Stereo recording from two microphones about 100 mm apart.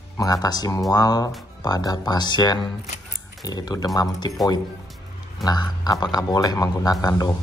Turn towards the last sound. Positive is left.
turn(degrees=35)  # may be behind; listen again after turning